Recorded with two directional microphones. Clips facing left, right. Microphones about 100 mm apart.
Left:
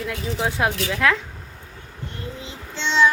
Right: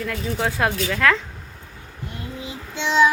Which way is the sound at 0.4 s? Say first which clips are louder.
Even; 15° left (ahead or behind).